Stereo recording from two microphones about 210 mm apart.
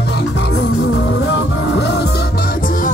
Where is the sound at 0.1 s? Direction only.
55° left (ahead or behind).